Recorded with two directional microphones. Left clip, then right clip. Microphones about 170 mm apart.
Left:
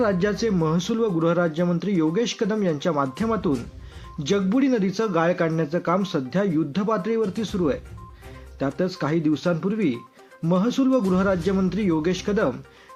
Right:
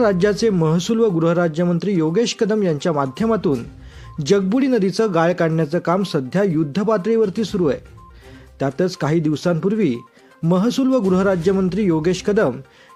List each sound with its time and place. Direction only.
0.0 s a man's voice: 40° right (ahead or behind)